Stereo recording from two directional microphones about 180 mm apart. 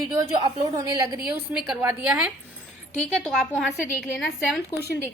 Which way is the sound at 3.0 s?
5° left (ahead or behind).